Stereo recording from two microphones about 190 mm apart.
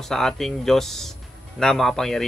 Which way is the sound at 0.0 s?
Centre (ahead or behind).